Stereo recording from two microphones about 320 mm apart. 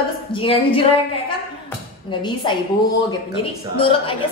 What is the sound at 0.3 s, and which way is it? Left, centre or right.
Speech, centre.